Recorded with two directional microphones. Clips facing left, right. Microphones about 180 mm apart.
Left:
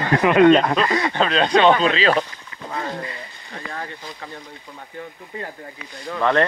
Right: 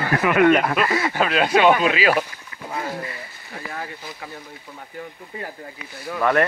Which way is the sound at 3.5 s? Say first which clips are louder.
Even; 10° right (ahead or behind).